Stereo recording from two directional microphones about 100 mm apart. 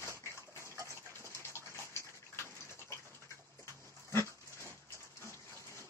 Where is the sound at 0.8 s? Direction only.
30° right (ahead or behind).